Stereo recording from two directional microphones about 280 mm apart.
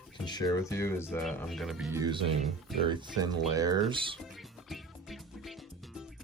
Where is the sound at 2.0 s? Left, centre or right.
Centre.